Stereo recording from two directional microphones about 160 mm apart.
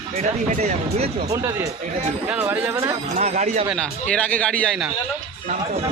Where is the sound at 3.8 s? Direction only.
5° left (ahead or behind).